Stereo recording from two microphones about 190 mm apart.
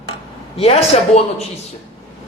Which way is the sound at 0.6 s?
35° left (ahead or behind).